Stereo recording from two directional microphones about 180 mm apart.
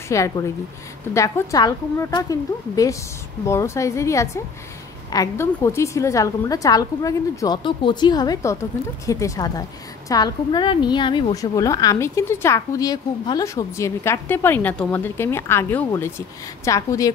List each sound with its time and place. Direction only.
0.1 s a woman's voice: 15° left (ahead or behind)